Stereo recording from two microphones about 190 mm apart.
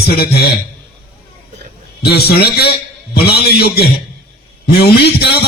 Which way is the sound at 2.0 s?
55° left (ahead or behind).